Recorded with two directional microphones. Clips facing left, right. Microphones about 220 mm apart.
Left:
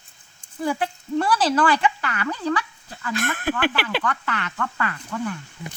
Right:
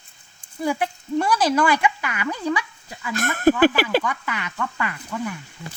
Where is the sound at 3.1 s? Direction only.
45° right (ahead or behind).